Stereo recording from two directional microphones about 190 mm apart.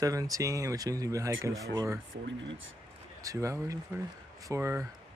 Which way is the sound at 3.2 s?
15° right (ahead or behind).